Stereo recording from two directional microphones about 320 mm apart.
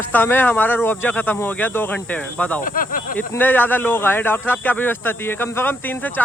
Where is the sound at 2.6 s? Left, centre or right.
Left.